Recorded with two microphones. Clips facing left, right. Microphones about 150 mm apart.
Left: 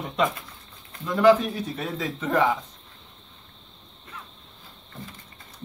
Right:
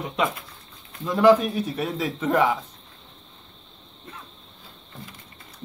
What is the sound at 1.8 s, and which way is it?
Speech, 15° right (ahead or behind).